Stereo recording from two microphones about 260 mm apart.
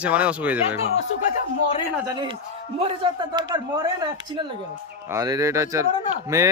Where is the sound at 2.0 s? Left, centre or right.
Centre.